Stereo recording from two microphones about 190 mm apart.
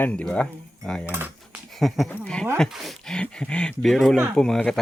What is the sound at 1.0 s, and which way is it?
Speech, 10° right (ahead or behind).